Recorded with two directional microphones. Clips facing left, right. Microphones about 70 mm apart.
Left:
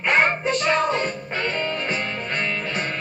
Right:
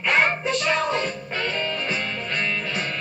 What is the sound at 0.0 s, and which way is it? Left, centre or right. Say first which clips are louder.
Music: left 1 dB; left.